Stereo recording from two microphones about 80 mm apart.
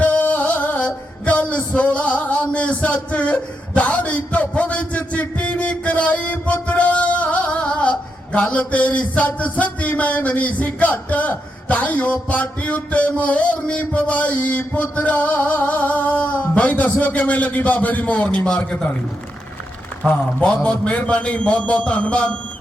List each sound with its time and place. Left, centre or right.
0.0 s music: centre
18.6 s a man's voice: centre
20.1 s a man's voice: centre